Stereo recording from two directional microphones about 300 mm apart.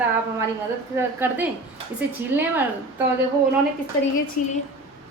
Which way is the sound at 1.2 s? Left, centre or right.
Centre.